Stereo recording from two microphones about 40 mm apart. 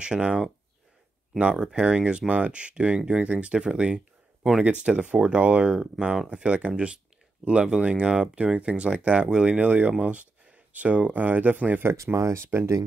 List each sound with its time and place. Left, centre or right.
0.0 s speech: right
1.6 s speech: right
9.6 s speech: right
11.8 s speech: right